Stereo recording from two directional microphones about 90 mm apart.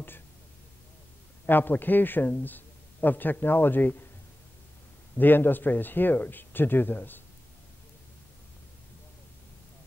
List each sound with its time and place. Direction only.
1.4 s speech: 20° left (ahead or behind)
5.1 s speech: 20° left (ahead or behind)